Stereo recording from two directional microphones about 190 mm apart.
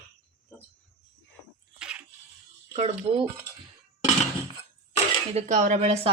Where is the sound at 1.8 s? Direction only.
5° right (ahead or behind).